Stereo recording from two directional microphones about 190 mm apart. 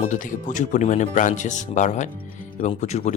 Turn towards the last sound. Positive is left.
turn(degrees=35)  # may be behind; listen again after turning